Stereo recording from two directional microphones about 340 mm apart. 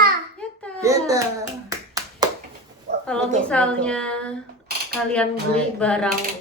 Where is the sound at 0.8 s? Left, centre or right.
Centre.